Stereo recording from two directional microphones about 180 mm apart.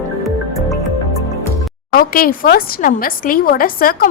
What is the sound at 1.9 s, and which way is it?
Speech, 55° left (ahead or behind).